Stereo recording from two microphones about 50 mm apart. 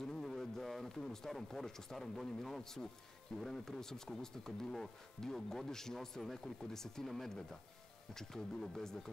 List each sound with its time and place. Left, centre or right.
0.0 s a man's voice: centre